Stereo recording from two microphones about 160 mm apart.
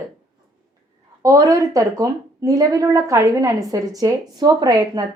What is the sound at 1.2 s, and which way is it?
A woman's voice, 20° right (ahead or behind).